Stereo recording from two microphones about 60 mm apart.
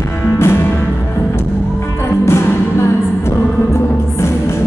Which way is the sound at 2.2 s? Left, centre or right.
Left.